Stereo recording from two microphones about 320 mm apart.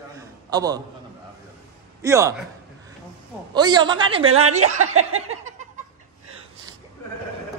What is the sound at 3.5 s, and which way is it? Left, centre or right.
Speech, centre.